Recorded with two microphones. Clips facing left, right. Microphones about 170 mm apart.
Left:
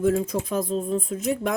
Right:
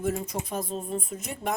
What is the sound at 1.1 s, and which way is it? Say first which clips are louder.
Speech: left 7 dB; 90° left.